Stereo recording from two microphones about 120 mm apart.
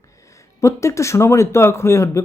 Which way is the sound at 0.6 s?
25° left (ahead or behind).